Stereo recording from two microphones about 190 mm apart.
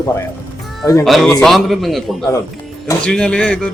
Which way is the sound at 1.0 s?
Centre (ahead or behind).